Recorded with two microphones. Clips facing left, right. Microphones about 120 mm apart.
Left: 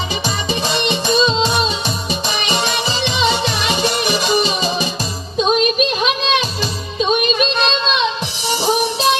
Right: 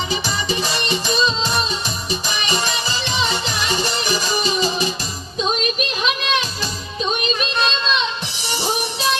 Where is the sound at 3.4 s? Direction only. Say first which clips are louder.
Left 4 dB; 70° left (ahead or behind).